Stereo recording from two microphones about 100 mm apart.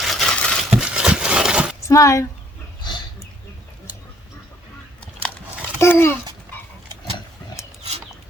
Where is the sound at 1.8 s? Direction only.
30° left (ahead or behind).